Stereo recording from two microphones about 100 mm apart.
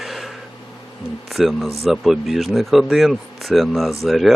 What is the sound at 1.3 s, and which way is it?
Speech, centre (ahead or behind).